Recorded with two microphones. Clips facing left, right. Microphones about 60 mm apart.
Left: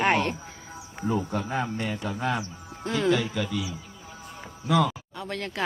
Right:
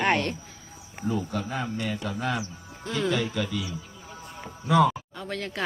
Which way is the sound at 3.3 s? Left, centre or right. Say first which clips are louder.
Even; centre.